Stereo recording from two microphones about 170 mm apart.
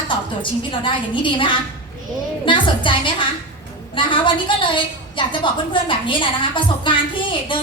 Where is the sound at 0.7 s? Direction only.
30° left (ahead or behind).